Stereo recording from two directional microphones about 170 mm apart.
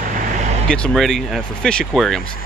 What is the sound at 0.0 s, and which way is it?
Vehicle, 50° right (ahead or behind).